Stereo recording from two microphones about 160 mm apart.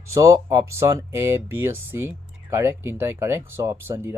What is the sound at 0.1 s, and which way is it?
Speech, 20° right (ahead or behind).